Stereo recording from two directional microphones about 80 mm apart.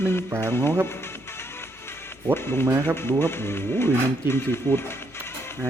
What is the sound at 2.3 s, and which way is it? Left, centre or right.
Speech, left.